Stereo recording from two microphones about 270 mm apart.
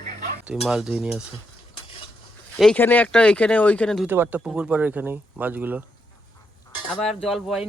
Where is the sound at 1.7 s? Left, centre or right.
Centre.